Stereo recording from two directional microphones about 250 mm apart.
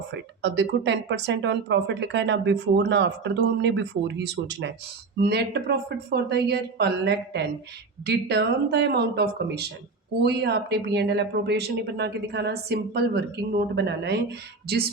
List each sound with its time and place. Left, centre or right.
0.1 s speech: right